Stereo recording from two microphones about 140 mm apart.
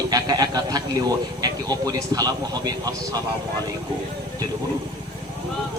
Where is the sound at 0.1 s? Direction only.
25° right (ahead or behind).